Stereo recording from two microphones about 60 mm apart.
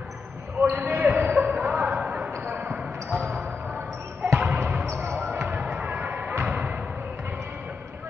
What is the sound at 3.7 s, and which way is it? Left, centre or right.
Basketball bounce, right.